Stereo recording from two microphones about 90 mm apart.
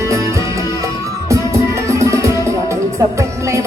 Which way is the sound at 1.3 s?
35° right (ahead or behind).